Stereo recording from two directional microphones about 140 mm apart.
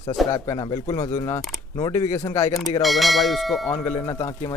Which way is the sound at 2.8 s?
Centre (ahead or behind).